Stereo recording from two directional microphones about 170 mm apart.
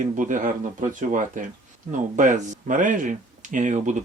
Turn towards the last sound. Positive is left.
turn(degrees=-45)  # may be behind; listen again after turning